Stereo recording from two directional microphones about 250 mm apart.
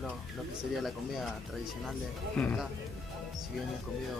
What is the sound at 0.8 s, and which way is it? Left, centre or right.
Speech, centre.